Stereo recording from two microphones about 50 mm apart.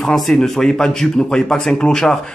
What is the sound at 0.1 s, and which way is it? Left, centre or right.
Speech, centre.